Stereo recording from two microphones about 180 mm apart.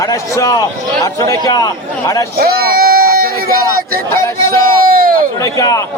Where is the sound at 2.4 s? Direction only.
60° right (ahead or behind).